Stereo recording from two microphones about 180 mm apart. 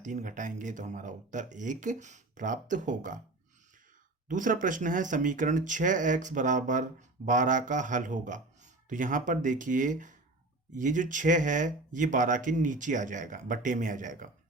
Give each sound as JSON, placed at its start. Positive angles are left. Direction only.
{"t": 0.0, "sound": "speech", "side_deg": -45}
{"t": 4.3, "sound": "speech", "side_deg": -45}